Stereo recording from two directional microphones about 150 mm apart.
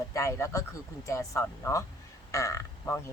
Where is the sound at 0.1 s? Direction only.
20° left (ahead or behind).